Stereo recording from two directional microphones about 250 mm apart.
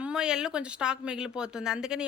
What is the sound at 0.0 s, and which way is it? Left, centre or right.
Speech, centre.